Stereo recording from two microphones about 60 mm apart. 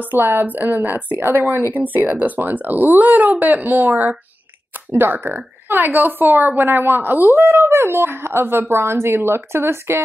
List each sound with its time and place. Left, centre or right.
0.1 s speech: right
4.9 s speech: right